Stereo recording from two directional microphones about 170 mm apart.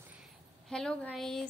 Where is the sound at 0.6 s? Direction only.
5° left (ahead or behind).